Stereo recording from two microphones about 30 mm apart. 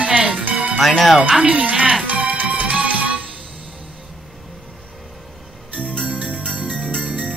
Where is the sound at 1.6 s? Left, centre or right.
Right.